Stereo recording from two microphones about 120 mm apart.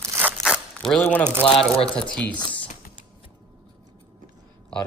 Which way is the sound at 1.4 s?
55° left (ahead or behind).